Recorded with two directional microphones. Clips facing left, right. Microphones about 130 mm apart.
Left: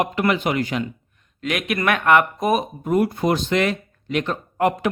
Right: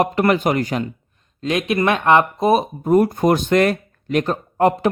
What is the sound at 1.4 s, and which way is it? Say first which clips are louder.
Speech: right 5 dB; 30° right (ahead or behind).